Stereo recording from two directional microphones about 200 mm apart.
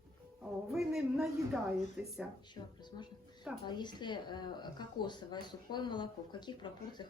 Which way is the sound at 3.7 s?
20° left (ahead or behind).